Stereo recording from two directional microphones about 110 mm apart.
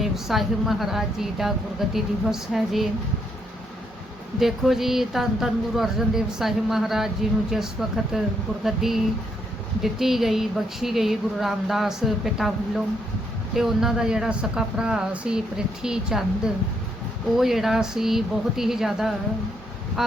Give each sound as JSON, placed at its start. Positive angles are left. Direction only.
{"t": 0.0, "sound": "speech", "side_deg": 0}
{"t": 4.4, "sound": "speech", "side_deg": 0}